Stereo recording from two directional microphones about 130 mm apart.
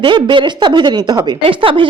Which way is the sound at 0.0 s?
40° right (ahead or behind).